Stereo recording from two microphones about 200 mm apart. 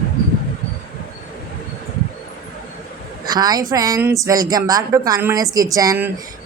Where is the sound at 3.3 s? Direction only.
20° right (ahead or behind).